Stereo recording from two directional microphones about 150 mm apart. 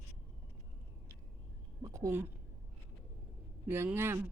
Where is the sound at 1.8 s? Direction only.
20° right (ahead or behind).